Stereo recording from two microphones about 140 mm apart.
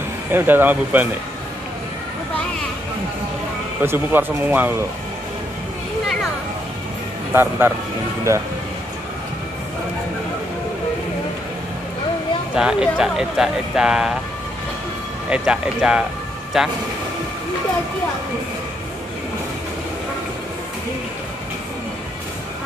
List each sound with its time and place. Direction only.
0.3 s speech: 15° right (ahead or behind)
3.8 s speech: 15° right (ahead or behind)
7.3 s speech: 15° right (ahead or behind)
12.5 s speech: 5° right (ahead or behind)
15.2 s speech: 10° right (ahead or behind)